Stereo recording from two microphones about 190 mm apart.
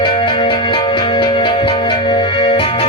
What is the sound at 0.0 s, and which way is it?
Music, 25° left (ahead or behind).